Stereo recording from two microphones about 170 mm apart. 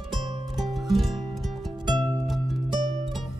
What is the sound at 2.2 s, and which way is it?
Music, centre (ahead or behind).